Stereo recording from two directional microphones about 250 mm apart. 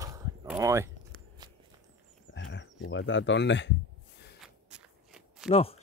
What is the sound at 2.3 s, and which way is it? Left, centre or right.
Speech, left.